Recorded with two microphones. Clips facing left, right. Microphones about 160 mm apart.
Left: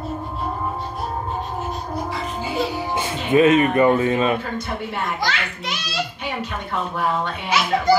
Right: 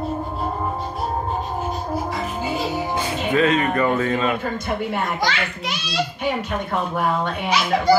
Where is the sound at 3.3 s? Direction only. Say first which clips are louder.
Left 5 dB; 20° left (ahead or behind).